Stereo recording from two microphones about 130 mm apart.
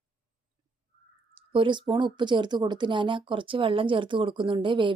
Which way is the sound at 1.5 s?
40° right (ahead or behind).